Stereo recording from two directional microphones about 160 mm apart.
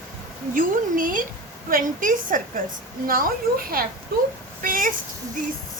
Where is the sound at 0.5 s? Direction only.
60° right (ahead or behind).